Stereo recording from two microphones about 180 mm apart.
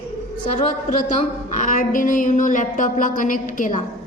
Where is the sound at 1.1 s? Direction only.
45° left (ahead or behind).